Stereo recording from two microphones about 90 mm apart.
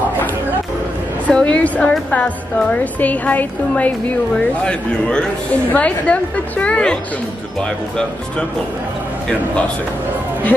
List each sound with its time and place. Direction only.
1.2 s a woman's voice: 15° left (ahead or behind)